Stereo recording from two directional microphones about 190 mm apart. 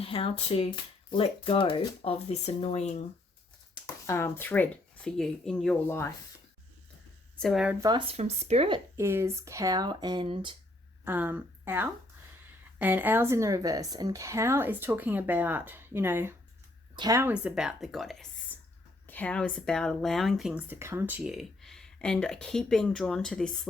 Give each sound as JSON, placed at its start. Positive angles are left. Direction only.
{"t": 0.0, "sound": "speech", "side_deg": 30}
{"t": 3.8, "sound": "speech", "side_deg": 15}
{"t": 7.3, "sound": "speech", "side_deg": 0}
{"t": 7.8, "sound": "speech", "side_deg": -25}
{"t": 9.0, "sound": "speech", "side_deg": -15}
{"t": 11.0, "sound": "speech", "side_deg": -10}
{"t": 20.7, "sound": "speech", "side_deg": -15}